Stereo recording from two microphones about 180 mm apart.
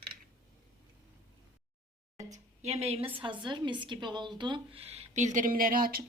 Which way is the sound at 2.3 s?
40° right (ahead or behind).